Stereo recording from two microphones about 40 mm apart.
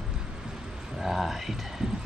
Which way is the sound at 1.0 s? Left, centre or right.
Centre.